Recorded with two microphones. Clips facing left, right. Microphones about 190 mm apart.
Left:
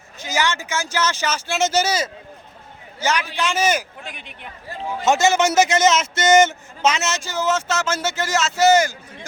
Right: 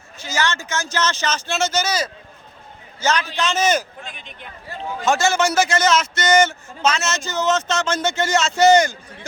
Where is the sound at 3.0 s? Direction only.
15° left (ahead or behind).